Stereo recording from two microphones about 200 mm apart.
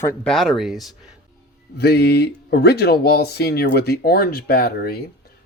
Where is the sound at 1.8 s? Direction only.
55° left (ahead or behind).